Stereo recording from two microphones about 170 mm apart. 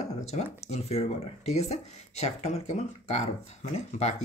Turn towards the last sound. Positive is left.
turn(degrees=40)  # may be behind; listen again after turning